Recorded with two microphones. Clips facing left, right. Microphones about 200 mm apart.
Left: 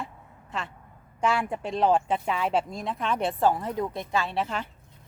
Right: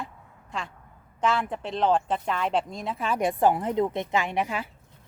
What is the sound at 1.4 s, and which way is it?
Speech, 5° left (ahead or behind).